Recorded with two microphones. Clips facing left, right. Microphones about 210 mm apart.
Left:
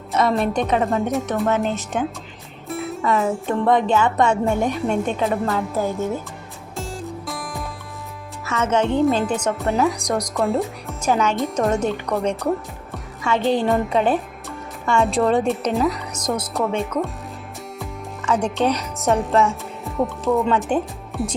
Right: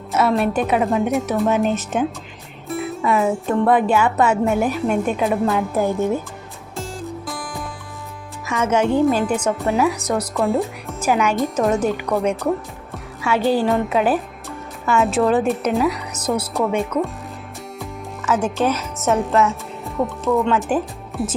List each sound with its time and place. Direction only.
0.1 s speech: 5° right (ahead or behind)
1.5 s a woman's voice: 15° right (ahead or behind)
2.6 s music: centre (ahead or behind)
3.0 s a woman's voice: 10° right (ahead or behind)
6.7 s music: centre (ahead or behind)
8.4 s a woman's voice: 10° right (ahead or behind)
11.1 s a woman's voice: 10° right (ahead or behind)
11.3 s speech: centre (ahead or behind)
18.3 s speech: 5° right (ahead or behind)